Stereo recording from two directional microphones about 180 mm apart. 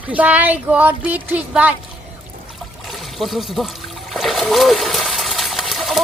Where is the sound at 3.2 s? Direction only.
Centre (ahead or behind).